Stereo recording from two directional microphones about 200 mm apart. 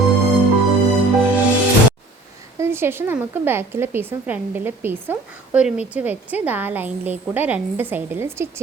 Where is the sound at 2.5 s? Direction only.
10° right (ahead or behind).